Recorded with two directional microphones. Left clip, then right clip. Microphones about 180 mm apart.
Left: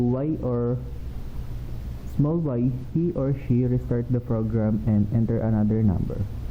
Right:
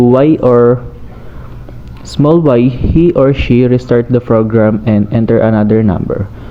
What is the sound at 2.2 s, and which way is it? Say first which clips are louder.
Speech: right 19 dB; 30° right (ahead or behind).